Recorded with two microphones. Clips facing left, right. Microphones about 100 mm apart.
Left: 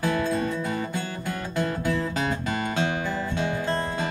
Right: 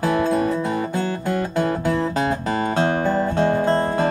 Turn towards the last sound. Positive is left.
turn(degrees=-45)  # may be behind; listen again after turning